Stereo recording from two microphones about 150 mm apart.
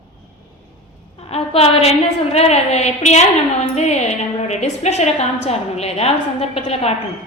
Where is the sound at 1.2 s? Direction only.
40° left (ahead or behind).